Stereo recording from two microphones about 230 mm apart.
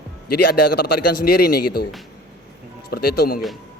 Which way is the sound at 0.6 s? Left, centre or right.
Left.